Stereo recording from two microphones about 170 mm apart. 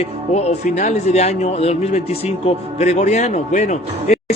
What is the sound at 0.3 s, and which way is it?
Speech, 45° left (ahead or behind).